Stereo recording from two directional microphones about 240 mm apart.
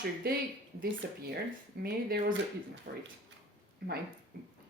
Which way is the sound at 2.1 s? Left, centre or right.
Right.